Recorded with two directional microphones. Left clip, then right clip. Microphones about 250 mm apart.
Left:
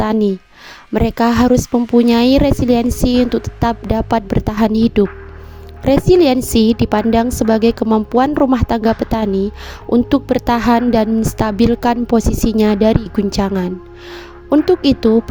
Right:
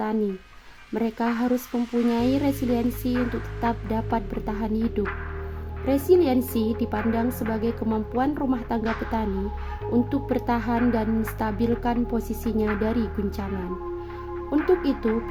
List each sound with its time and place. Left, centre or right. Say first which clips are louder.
0.0 s a woman's voice: left 11 dB; left
14.5 s a woman's voice: left 10 dB; left